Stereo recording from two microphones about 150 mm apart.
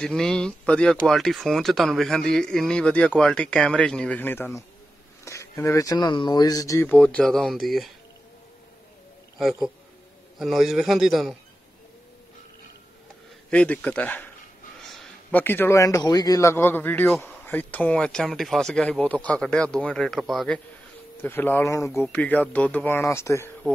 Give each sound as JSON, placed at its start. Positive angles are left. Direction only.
{"t": 0.0, "sound": "a man's voice", "side_deg": 5}
{"t": 6.9, "sound": "speech", "side_deg": 10}
{"t": 9.4, "sound": "speech", "side_deg": 0}
{"t": 13.5, "sound": "a man's voice", "side_deg": 10}
{"t": 14.8, "sound": "a sound", "side_deg": 0}
{"t": 15.4, "sound": "a man's voice", "side_deg": 15}
{"t": 21.2, "sound": "a man's voice", "side_deg": 15}
{"t": 22.0, "sound": "a man's voice", "side_deg": 10}